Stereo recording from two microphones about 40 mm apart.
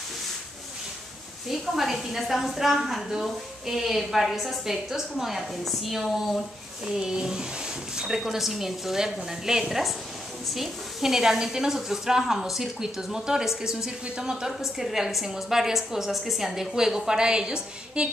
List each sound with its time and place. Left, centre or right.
1.5 s a woman's voice: centre
6.9 s a woman's voice: centre
14.3 s a woman's voice: centre